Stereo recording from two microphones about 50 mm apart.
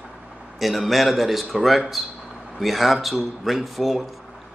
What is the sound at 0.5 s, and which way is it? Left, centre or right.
Speech, centre.